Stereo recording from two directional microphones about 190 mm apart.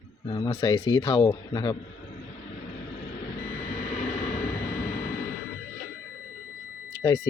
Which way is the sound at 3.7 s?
45° left (ahead or behind).